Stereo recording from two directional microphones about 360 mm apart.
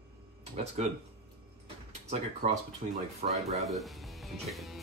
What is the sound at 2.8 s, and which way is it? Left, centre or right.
Speech, right.